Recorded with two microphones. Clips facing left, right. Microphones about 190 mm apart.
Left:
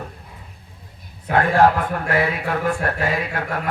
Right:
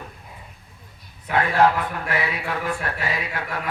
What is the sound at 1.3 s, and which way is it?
Speech, 50° left (ahead or behind).